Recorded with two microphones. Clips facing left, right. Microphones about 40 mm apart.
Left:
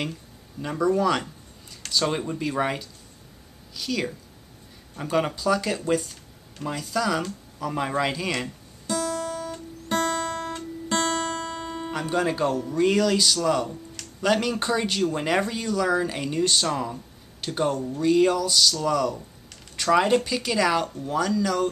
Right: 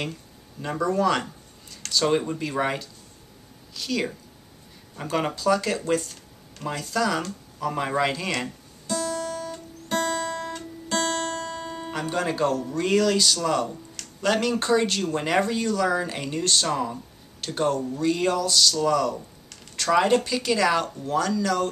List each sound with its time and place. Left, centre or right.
0.6 s speech: centre
5.1 s speech: centre
8.8 s guitar: centre
9.3 s guitar: centre
10.1 s guitar: left
11.6 s speech: centre
17.6 s speech: centre
17.8 s speech: centre